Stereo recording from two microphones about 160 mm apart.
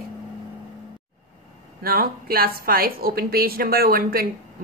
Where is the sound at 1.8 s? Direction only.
65° right (ahead or behind).